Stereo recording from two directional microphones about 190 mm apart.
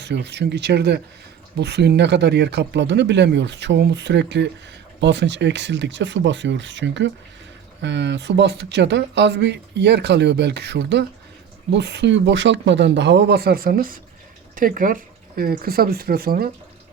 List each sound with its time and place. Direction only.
0.0 s speech: 65° right (ahead or behind)